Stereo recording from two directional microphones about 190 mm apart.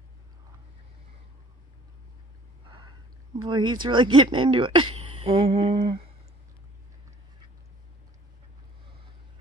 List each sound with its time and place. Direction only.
3.3 s speech: 25° right (ahead or behind)